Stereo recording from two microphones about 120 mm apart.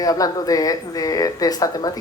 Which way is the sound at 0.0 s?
30° left (ahead or behind).